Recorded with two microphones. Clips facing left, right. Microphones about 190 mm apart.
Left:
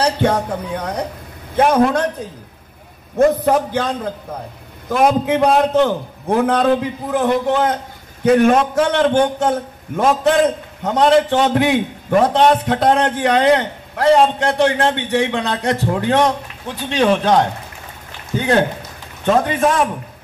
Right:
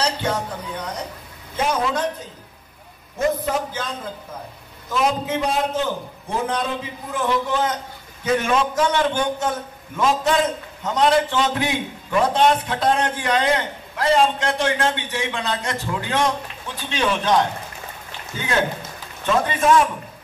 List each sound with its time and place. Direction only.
0.0 s a man's voice: 60° left (ahead or behind)
3.2 s a man's voice: 60° left (ahead or behind)
19.2 s a man's voice: 55° left (ahead or behind)